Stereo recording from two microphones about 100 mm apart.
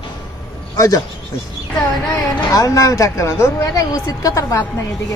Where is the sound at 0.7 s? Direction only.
35° left (ahead or behind).